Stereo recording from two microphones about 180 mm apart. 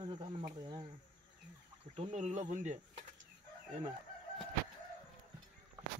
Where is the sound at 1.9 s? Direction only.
40° right (ahead or behind).